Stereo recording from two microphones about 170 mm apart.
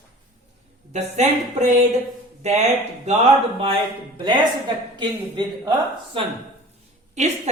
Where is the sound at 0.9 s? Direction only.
45° right (ahead or behind).